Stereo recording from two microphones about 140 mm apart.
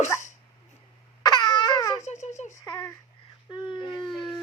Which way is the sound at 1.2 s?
30° left (ahead or behind).